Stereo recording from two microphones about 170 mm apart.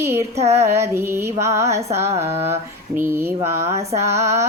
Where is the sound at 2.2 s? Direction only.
40° right (ahead or behind).